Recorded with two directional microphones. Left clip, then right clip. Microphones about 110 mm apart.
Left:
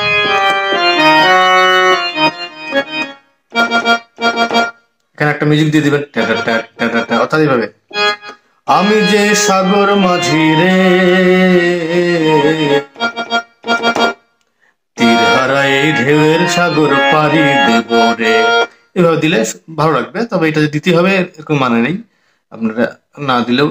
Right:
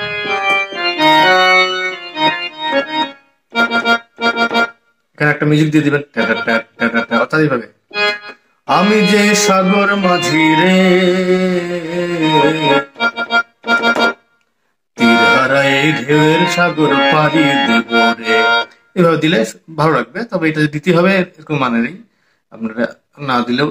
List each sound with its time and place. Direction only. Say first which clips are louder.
0.0 s organ: left 6 dB; 5° left (ahead or behind)
5.1 s a sound: left 1 dB; 25° left (ahead or behind)
6.1 s speech: left 1 dB; 5° left (ahead or behind)
6.5 s music: left 1 dB; 10° left (ahead or behind)
7.2 s speech: left 3 dB; 25° left (ahead or behind)
7.9 s music: even; 5° left (ahead or behind)
9.6 s speech: left 2 dB; 5° left (ahead or behind)
10.3 s music: even; 5° left (ahead or behind)
11.0 s a sound: left 3 dB; 25° left (ahead or behind)
11.7 s music: left 6 dB; 5° left (ahead or behind)
15.6 s mantra: left 2 dB; 5° left (ahead or behind)
16.6 s music: left 2 dB; 10° left (ahead or behind)
22.5 s speech: left 4 dB; 15° left (ahead or behind)